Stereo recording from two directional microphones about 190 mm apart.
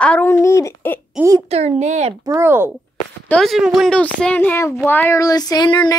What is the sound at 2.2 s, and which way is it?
Speech, 15° right (ahead or behind).